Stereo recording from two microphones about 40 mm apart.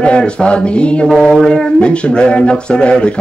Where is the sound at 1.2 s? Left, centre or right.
Centre.